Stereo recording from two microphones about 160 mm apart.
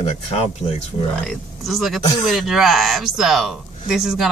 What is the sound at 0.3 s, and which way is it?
Speech, 40° left (ahead or behind).